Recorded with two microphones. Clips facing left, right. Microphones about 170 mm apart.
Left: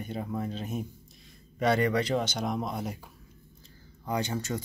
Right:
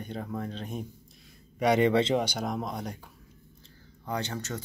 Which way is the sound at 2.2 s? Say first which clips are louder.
Left 1 dB; 5° right (ahead or behind).